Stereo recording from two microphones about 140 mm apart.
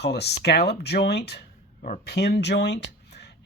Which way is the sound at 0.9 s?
90° left.